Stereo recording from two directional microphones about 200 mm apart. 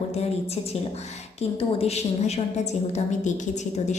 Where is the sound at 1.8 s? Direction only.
30° left (ahead or behind).